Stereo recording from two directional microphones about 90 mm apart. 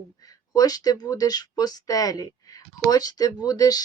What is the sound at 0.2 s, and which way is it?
Speech, 45° left (ahead or behind).